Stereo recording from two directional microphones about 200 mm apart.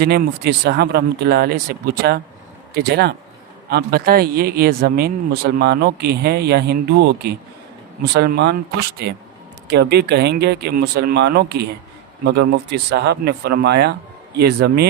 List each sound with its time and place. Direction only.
0.0 s a man's voice: 55° right (ahead or behind)